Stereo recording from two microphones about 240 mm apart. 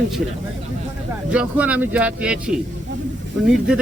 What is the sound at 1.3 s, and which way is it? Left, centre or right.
A man's voice, centre.